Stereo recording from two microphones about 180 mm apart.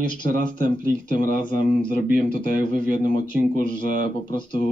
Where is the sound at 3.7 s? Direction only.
25° left (ahead or behind).